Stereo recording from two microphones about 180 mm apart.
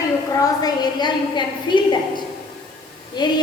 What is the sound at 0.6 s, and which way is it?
A woman's voice, 25° left (ahead or behind).